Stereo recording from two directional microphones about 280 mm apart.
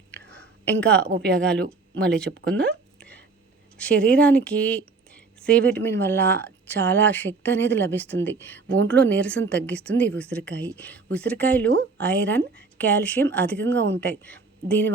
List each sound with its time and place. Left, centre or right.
0.3 s a sound: centre
1.0 s speech: right
1.4 s a woman's voice: centre
3.0 s whispering: centre
3.8 s a woman's voice: centre